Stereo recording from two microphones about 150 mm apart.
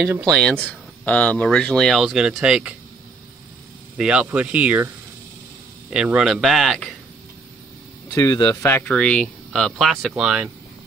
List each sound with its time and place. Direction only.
0.0 s speech: 15° right (ahead or behind)
0.3 s speech: 5° left (ahead or behind)
3.9 s speech: 5° right (ahead or behind)
8.1 s speech: 25° left (ahead or behind)
8.8 s speech: 5° left (ahead or behind)